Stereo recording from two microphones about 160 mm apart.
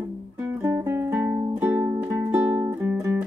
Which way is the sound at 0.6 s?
15° right (ahead or behind).